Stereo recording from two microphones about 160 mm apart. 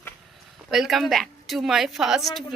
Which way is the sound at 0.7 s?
Centre (ahead or behind).